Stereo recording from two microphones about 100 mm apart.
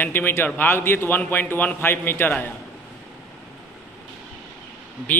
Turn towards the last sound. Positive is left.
turn(degrees=20)  # may be behind; listen again after turning